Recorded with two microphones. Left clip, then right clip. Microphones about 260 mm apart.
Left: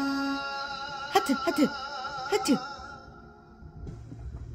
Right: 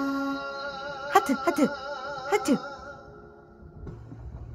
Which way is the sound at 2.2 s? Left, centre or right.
Centre.